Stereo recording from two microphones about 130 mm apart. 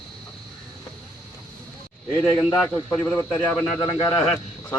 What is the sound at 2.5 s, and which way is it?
Speech, 15° left (ahead or behind).